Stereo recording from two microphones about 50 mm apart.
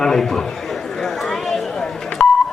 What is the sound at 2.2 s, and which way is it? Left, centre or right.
Beep, left.